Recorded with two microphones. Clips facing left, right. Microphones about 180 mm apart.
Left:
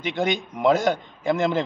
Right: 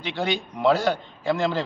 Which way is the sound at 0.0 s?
20° left (ahead or behind).